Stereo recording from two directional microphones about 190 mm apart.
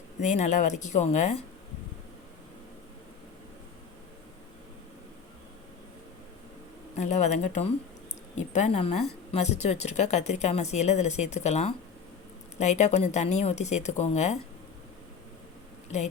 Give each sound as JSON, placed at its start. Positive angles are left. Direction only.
{"t": 0.2, "sound": "speech", "side_deg": 40}
{"t": 6.9, "sound": "speech", "side_deg": 35}